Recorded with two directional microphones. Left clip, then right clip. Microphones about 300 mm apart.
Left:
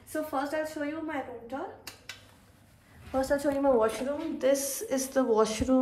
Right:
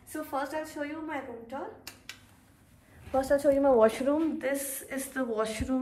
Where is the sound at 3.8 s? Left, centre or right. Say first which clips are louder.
Right 4 dB; right.